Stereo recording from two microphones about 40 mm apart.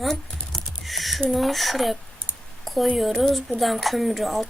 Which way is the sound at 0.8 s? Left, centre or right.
Centre.